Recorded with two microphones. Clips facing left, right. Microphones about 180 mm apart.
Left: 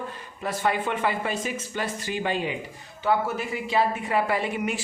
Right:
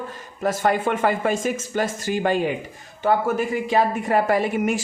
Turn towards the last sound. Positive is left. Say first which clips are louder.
# right 6 dB
turn(degrees=-45)  # may be behind; listen again after turning